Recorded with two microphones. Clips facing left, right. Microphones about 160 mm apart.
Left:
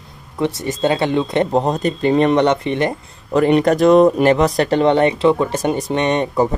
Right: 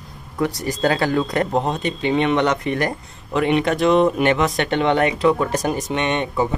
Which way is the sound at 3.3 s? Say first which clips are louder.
Left 5 dB; centre (ahead or behind).